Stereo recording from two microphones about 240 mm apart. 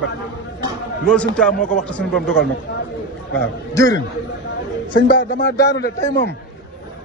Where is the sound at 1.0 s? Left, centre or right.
Centre.